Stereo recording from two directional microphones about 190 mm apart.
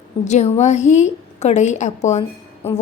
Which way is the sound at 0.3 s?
35° left (ahead or behind).